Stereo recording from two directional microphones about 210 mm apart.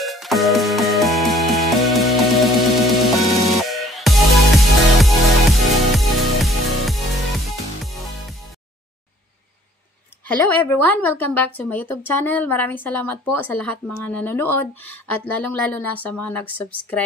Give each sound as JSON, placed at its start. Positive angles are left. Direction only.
{"t": 0.0, "sound": "music", "side_deg": 0}
{"t": 10.2, "sound": "a woman's voice", "side_deg": 10}